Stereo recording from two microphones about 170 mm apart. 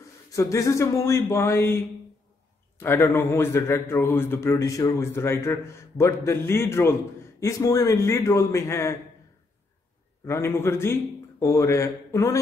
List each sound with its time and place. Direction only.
0.3 s a man's voice: 20° left (ahead or behind)
10.2 s a man's voice: 15° left (ahead or behind)